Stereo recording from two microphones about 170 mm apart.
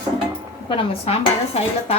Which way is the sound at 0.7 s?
35° left (ahead or behind).